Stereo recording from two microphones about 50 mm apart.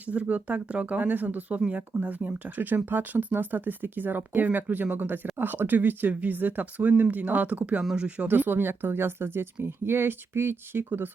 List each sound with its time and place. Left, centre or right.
0.1 s speech: right
7.9 s speech: right
8.3 s speech: right